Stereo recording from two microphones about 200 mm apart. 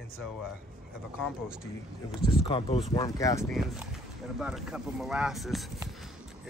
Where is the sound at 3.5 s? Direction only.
Centre (ahead or behind).